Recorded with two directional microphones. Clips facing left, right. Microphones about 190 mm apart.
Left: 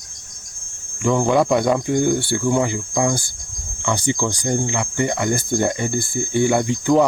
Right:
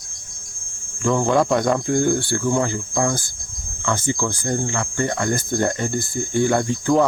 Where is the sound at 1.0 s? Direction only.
10° left (ahead or behind).